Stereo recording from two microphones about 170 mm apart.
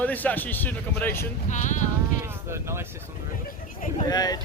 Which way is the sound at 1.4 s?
45° left (ahead or behind).